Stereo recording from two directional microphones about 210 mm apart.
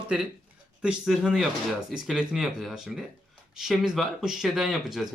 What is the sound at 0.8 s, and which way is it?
Speech, 5° right (ahead or behind).